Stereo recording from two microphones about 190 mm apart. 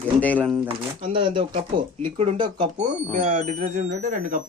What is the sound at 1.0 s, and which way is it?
Speech, 25° right (ahead or behind).